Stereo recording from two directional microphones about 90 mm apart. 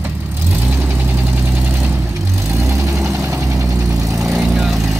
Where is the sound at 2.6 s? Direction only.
35° right (ahead or behind).